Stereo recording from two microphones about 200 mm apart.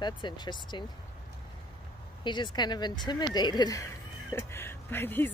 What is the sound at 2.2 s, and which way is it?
Speech, 20° left (ahead or behind).